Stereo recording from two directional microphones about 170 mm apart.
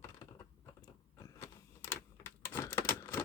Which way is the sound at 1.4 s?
15° left (ahead or behind).